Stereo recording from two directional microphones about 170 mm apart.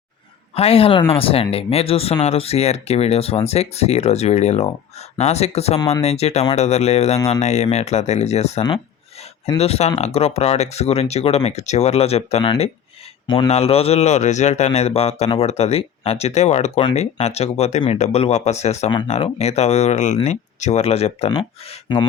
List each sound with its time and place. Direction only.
0.5 s speech: 35° left (ahead or behind)
13.5 s speech: 35° left (ahead or behind)
18.9 s speech: 25° left (ahead or behind)
19.1 s speech: 40° left (ahead or behind)